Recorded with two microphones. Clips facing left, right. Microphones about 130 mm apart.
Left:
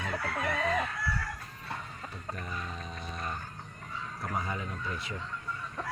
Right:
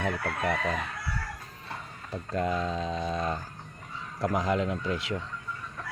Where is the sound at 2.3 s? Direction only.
90° right.